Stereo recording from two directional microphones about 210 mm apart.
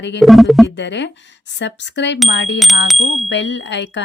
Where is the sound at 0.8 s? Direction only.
55° left (ahead or behind).